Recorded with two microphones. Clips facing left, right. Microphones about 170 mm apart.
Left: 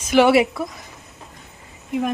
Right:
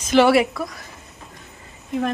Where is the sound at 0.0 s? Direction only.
15° left (ahead or behind).